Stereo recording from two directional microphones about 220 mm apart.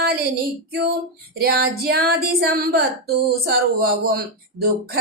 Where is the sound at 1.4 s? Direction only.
45° right (ahead or behind).